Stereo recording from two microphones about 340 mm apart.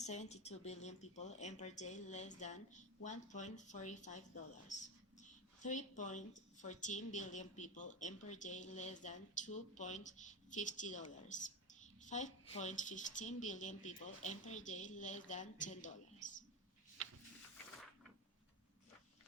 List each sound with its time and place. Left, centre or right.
0.0 s a woman's voice: centre
5.6 s a woman's voice: left